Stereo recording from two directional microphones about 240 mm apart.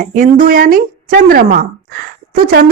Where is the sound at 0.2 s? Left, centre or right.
Right.